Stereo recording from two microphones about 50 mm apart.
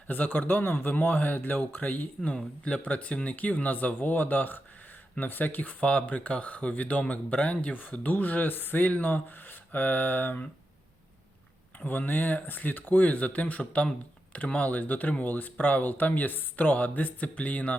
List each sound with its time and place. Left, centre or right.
0.1 s speech: left
11.9 s speech: left